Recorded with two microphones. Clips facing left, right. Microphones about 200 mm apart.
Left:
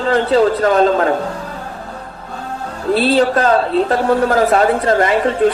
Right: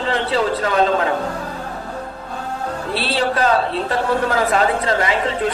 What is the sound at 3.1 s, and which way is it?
Speech, 45° left (ahead or behind).